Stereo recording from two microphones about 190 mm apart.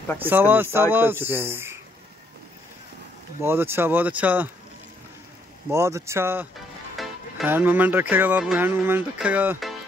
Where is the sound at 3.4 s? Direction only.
10° right (ahead or behind).